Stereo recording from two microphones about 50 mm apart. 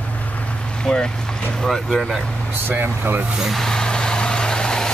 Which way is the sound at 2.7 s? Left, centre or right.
Right.